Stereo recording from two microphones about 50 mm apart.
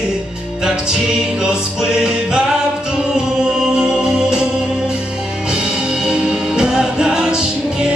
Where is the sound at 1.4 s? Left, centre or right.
Centre.